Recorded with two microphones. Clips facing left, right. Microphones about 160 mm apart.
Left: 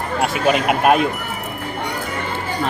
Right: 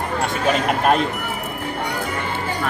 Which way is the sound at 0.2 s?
10° left (ahead or behind).